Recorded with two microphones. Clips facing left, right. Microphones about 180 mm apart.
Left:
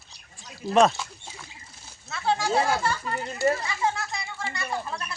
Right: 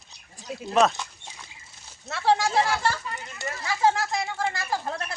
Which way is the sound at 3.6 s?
90° right.